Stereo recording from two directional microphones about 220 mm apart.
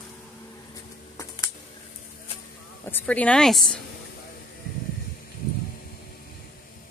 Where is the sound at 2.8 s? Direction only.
10° left (ahead or behind).